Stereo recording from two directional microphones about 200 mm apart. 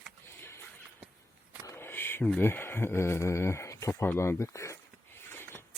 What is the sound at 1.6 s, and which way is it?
Speech, 10° left (ahead or behind).